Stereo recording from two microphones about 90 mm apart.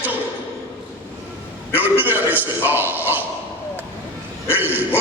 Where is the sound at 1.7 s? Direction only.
20° right (ahead or behind).